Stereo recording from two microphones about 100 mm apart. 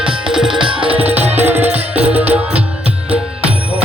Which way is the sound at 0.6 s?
60° right (ahead or behind).